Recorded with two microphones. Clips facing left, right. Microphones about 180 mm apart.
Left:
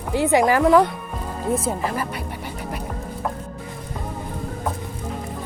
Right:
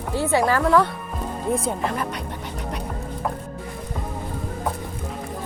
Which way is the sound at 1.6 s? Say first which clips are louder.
Left 1 dB; 5° left (ahead or behind).